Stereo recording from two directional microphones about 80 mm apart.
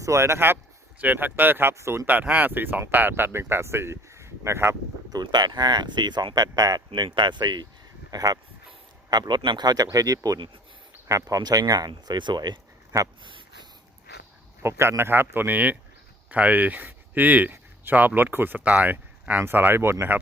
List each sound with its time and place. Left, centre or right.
0.0 s speech: right
2.0 s speech: centre
5.1 s speech: right
8.1 s speech: right
11.9 s speech: right
13.2 s a sound: right
14.6 s speech: right